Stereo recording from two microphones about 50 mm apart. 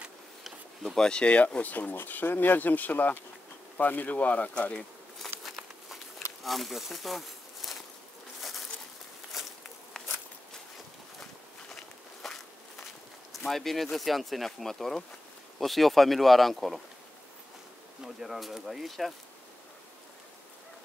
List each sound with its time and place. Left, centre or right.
0.9 s speech: centre
5.2 s a sound: centre
6.4 s speech: centre
8.4 s a sound: centre
9.3 s walk: centre
9.9 s walk: centre
11.7 s walk: centre
13.3 s speech: centre
18.0 s speech: centre